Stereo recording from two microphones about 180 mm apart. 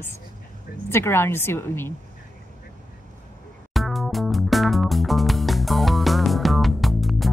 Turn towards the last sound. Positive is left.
turn(degrees=0)  # may be behind; listen again after turning